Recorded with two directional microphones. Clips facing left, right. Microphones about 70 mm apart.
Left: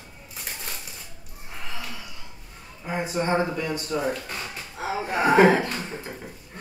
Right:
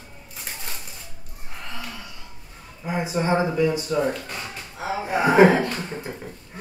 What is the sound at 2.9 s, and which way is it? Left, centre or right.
Speech, centre.